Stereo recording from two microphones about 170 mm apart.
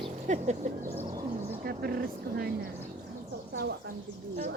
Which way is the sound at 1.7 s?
65° right (ahead or behind).